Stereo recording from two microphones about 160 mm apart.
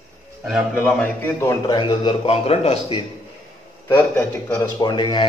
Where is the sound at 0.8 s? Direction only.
10° left (ahead or behind).